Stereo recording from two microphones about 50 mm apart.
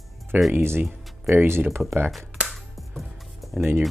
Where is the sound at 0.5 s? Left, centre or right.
Right.